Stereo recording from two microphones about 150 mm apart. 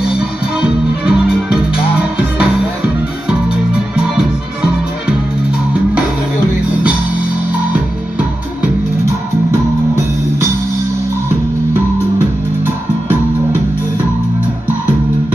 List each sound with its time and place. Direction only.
0.2 s music: 5° right (ahead or behind)
9.5 s music: 15° right (ahead or behind)